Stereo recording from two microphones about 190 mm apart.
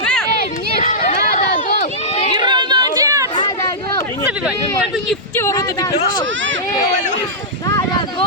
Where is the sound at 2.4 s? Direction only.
25° right (ahead or behind).